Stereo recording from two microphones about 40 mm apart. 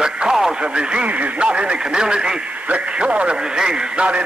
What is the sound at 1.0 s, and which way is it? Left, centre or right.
Speech, right.